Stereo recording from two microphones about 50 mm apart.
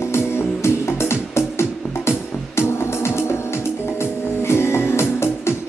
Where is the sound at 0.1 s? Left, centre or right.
Left.